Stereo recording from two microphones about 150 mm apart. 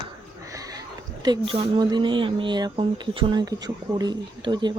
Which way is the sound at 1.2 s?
30° right (ahead or behind).